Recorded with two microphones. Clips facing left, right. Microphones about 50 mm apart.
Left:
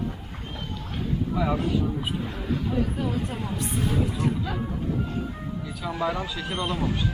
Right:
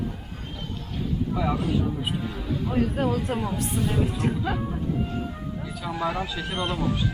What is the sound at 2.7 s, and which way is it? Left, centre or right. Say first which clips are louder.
Speech: right 6 dB; right.